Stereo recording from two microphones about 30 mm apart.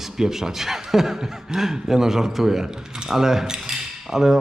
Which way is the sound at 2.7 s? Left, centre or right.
Right.